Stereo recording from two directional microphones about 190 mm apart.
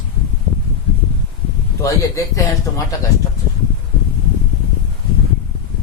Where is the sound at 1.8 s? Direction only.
15° left (ahead or behind).